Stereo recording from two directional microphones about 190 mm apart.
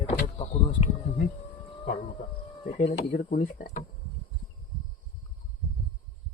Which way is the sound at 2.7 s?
45° left (ahead or behind).